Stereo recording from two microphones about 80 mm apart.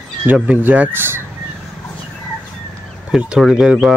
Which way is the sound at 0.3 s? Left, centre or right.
Right.